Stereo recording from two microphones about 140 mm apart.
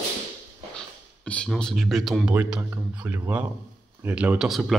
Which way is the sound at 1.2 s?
10° left (ahead or behind).